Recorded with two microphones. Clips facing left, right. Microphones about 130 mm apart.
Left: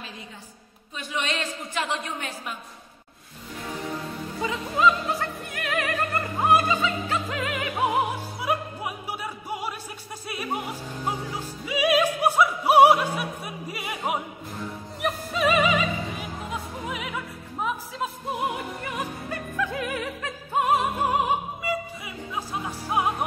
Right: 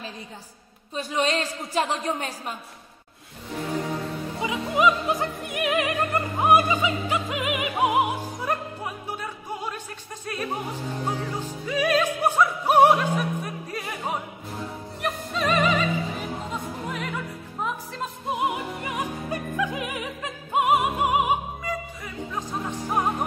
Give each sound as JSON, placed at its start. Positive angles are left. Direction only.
{"t": 0.9, "sound": "a woman's voice", "side_deg": -35}
{"t": 4.4, "sound": "opera", "side_deg": -15}
{"t": 8.4, "sound": "music", "side_deg": 10}
{"t": 10.2, "sound": "opera", "side_deg": 10}
{"t": 11.3, "sound": "music", "side_deg": 10}
{"t": 12.2, "sound": "opera", "side_deg": 10}
{"t": 18.9, "sound": "opera", "side_deg": -15}
{"t": 21.6, "sound": "music", "side_deg": 10}